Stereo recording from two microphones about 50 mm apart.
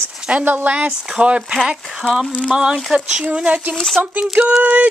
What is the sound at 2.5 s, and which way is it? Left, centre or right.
Speech, centre.